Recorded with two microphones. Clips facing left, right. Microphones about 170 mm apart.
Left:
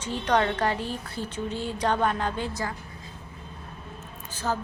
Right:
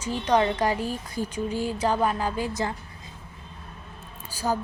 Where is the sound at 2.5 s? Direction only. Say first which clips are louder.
Right 3 dB; 20° right (ahead or behind).